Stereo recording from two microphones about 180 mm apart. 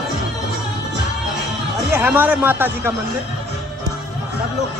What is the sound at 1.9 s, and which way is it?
Speech, 10° right (ahead or behind).